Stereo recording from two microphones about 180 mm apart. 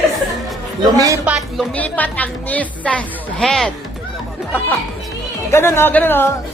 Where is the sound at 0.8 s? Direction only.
20° right (ahead or behind).